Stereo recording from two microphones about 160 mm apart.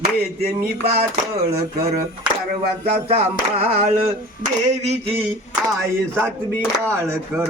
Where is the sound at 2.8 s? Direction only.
40° right (ahead or behind).